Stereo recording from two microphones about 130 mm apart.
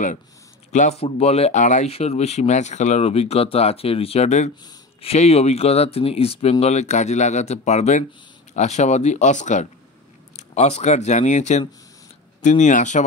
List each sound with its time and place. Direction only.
0.7 s speech: 60° left (ahead or behind)
6.6 s speech: 60° left (ahead or behind)
10.3 s speech: 55° left (ahead or behind)